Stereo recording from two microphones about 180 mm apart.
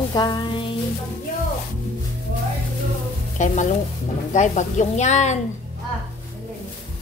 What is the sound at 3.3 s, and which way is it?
Sizzle, 45° left (ahead or behind).